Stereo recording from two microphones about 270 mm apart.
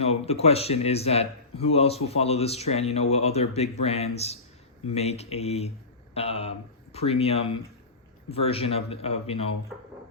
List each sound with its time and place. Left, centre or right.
0.0 s speech: left